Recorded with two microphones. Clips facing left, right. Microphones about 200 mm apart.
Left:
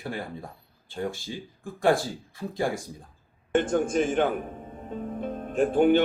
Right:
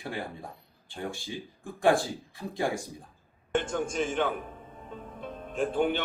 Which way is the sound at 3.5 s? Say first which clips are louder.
Left 6 dB; 50° left (ahead or behind).